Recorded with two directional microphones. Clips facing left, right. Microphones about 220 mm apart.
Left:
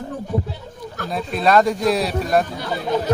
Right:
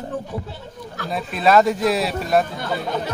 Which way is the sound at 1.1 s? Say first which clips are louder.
Even; centre (ahead or behind).